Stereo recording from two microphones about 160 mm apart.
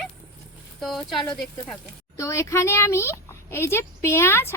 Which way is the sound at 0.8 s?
Centre (ahead or behind).